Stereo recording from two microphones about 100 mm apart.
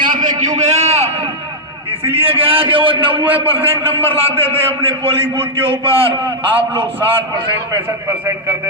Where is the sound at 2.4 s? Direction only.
65° right (ahead or behind).